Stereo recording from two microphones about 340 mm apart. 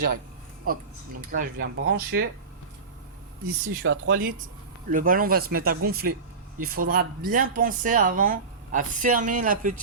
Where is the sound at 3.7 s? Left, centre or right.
Right.